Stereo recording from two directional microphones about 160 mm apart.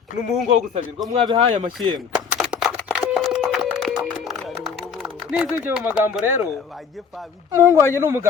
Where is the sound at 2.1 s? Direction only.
Centre (ahead or behind).